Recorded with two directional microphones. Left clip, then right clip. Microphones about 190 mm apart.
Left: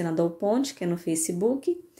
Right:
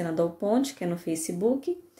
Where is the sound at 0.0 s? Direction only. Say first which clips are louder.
Left 1 dB; 15° left (ahead or behind).